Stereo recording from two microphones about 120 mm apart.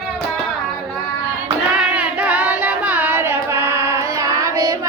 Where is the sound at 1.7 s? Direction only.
10° right (ahead or behind).